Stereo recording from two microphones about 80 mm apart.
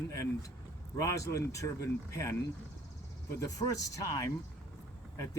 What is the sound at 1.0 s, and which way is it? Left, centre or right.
Speech, left.